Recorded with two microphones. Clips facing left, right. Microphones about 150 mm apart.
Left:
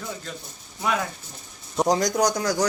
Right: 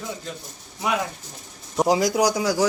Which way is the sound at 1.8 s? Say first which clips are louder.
Right 2 dB; 5° right (ahead or behind).